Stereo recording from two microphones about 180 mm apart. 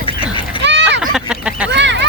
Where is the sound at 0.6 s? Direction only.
75° right (ahead or behind).